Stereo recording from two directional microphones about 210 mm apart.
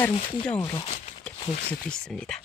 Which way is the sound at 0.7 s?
30° left (ahead or behind).